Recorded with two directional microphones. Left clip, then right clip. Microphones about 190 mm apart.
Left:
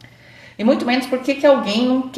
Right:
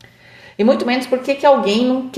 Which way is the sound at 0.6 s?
50° right (ahead or behind).